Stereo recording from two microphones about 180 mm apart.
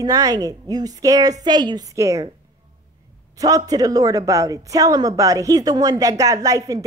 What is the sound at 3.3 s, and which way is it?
A woman's voice, 20° right (ahead or behind).